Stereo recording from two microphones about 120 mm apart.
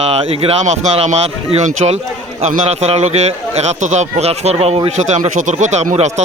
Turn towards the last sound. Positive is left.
turn(degrees=-70)  # may be behind; listen again after turning